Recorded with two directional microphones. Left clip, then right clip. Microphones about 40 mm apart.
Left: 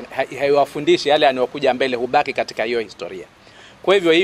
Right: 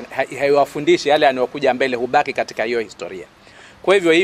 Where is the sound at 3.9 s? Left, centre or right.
Right.